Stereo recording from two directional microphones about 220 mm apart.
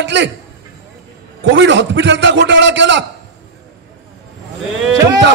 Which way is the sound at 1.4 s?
55° right (ahead or behind).